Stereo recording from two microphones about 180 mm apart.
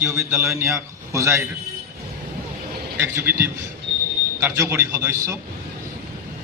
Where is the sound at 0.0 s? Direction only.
15° right (ahead or behind).